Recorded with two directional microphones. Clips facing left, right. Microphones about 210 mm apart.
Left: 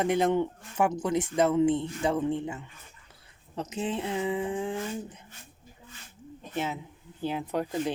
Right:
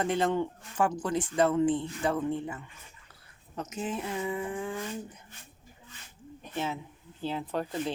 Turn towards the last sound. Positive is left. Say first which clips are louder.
# left 3 dB
turn(degrees=15)  # may be behind; listen again after turning